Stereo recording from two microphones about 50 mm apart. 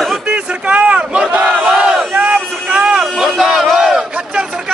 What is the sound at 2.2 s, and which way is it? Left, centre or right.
Vehicle, right.